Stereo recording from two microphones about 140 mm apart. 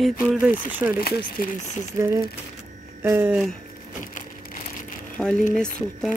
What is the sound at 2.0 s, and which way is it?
Speech, 25° right (ahead or behind).